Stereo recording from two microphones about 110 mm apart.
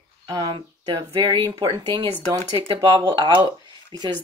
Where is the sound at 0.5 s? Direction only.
50° right (ahead or behind).